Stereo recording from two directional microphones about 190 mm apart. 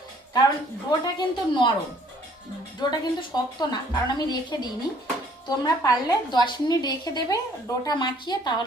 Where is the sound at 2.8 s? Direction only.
20° left (ahead or behind).